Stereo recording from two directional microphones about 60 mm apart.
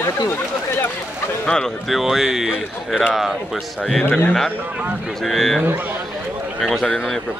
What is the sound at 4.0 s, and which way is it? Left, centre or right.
Speech, left.